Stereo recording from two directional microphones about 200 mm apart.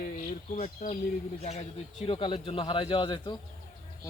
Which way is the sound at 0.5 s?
35° left (ahead or behind).